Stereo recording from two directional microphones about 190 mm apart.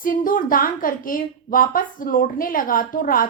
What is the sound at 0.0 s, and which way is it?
A woman's voice, 45° left (ahead or behind).